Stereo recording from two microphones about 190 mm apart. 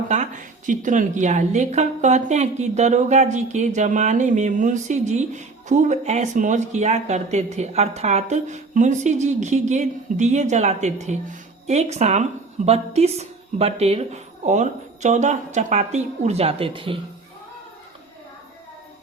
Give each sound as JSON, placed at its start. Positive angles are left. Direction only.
{"t": 0.1, "sound": "speech", "side_deg": -40}